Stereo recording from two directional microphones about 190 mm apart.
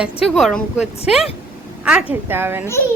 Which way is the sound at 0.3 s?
Centre (ahead or behind).